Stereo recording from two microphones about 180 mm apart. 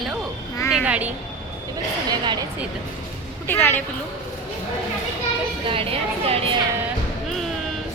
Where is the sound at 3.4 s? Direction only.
10° left (ahead or behind).